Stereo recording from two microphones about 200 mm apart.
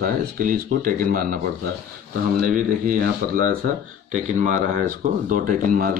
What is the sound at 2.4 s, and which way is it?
Speech, 40° right (ahead or behind).